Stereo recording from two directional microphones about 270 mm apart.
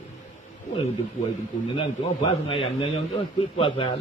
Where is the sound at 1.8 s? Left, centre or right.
Centre.